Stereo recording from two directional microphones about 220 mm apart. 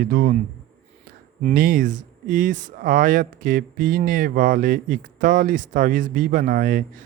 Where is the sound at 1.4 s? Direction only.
35° right (ahead or behind).